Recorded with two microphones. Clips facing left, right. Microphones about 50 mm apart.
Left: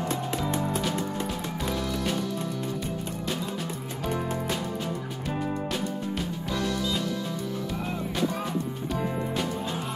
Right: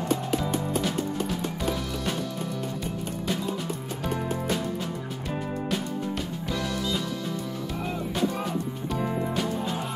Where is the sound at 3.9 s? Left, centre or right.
Centre.